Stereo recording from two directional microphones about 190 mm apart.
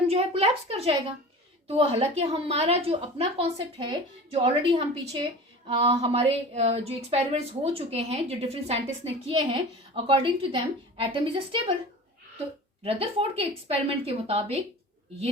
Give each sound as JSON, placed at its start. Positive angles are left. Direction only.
{"t": 0.1, "sound": "a woman's voice", "side_deg": -30}
{"t": 12.8, "sound": "speech", "side_deg": -30}